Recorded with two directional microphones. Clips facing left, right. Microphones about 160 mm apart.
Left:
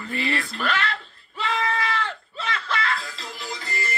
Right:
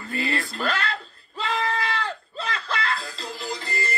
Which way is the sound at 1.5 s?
35° right (ahead or behind).